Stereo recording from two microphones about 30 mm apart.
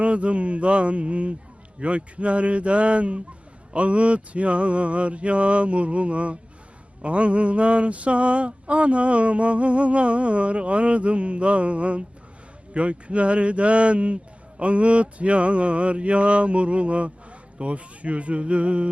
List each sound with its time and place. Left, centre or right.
0.0 s mantra: right